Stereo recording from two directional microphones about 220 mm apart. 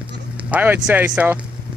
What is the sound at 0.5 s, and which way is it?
Speech, 5° right (ahead or behind).